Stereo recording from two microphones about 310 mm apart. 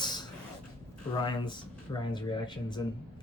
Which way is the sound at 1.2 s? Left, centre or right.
Centre.